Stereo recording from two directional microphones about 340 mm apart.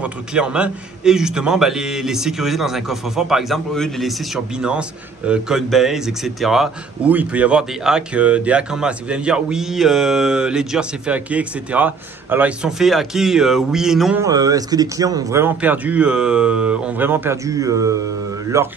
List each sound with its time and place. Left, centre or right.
0.0 s a man's voice: centre